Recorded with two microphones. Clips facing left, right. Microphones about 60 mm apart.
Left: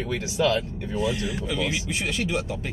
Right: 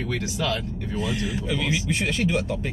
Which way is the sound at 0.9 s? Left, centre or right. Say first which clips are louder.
Left 1 dB; centre.